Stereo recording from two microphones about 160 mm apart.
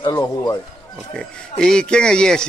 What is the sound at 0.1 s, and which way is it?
Speech, 25° left (ahead or behind).